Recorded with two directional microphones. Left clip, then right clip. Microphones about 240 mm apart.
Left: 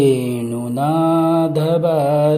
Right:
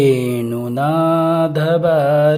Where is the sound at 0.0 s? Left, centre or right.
Centre.